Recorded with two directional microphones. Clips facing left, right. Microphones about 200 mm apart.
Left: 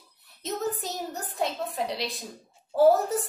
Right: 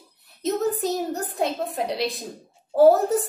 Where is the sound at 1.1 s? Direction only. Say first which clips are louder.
Right 5 dB; 45° right (ahead or behind).